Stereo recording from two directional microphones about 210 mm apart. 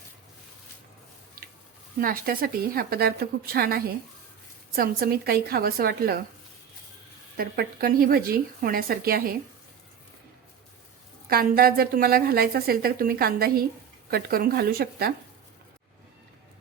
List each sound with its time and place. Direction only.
2.0 s a woman's voice: 45° right (ahead or behind)
7.3 s a woman's voice: 45° right (ahead or behind)
11.3 s a woman's voice: 45° right (ahead or behind)